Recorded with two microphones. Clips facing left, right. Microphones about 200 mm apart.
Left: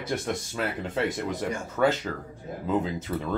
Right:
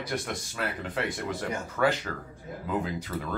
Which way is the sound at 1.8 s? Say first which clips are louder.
Left 3 dB; 15° left (ahead or behind).